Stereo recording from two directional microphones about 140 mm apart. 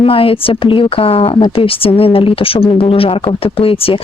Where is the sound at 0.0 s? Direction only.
40° left (ahead or behind).